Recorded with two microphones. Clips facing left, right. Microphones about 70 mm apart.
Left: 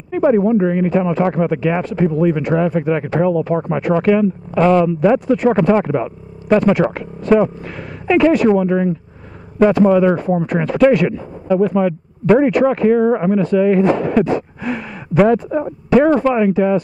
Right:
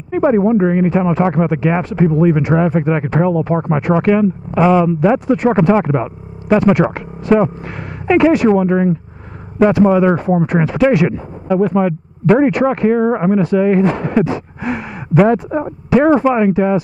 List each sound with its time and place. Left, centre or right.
0.1 s speech: centre
0.8 s speech: centre
2.5 s a man's voice: centre
13.4 s speech: centre